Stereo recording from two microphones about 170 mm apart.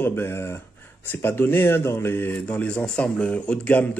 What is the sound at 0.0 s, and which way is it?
Speech, 15° left (ahead or behind).